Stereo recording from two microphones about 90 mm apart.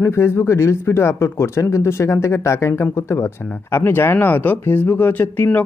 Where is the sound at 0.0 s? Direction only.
30° left (ahead or behind).